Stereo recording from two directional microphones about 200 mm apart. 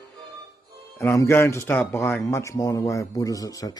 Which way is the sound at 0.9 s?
10° left (ahead or behind).